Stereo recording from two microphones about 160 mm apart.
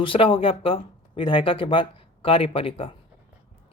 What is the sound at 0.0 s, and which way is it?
Speech, 35° left (ahead or behind).